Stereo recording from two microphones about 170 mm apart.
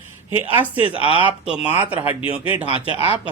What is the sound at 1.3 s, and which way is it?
Speech, 10° right (ahead or behind).